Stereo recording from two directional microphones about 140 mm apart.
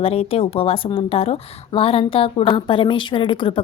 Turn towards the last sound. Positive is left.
turn(degrees=35)  # may be behind; listen again after turning